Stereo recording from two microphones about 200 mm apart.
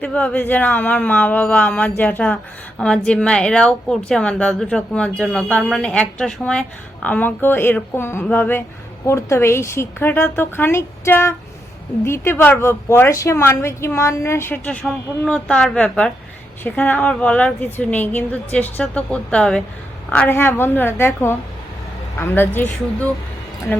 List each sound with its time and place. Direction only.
0.0 s speech: 5° left (ahead or behind)